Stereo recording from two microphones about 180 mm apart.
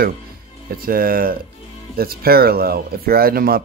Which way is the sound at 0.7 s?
55° right (ahead or behind).